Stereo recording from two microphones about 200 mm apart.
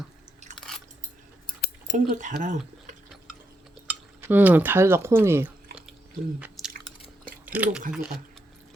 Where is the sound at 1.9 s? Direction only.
40° right (ahead or behind).